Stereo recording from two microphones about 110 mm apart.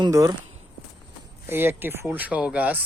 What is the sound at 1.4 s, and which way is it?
Speech, 20° right (ahead or behind).